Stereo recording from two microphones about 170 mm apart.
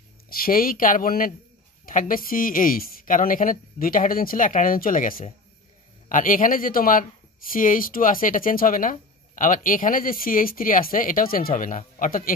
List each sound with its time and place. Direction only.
0.3 s speech: 55° left (ahead or behind)